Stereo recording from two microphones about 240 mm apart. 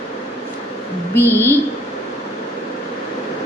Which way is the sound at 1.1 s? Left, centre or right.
Centre.